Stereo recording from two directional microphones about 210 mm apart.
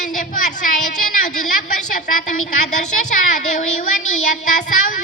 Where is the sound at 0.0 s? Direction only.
40° left (ahead or behind).